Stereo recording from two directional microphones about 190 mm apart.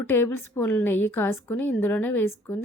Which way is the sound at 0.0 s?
10° left (ahead or behind).